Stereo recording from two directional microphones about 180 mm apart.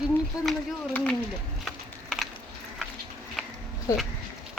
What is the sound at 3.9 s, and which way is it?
Speech, 20° left (ahead or behind).